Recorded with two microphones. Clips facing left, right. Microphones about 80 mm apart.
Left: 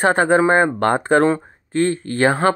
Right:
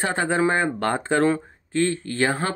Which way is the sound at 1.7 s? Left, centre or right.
Left.